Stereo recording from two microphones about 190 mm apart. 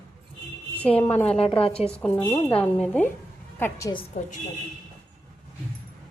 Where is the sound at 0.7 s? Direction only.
5° left (ahead or behind).